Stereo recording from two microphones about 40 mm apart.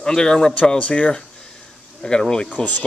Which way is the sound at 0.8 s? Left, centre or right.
Left.